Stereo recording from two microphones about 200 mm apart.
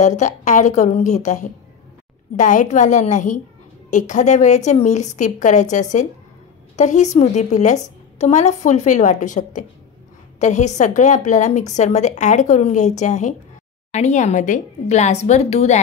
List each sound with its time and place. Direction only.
0.0 s a woman's voice: 35° left (ahead or behind)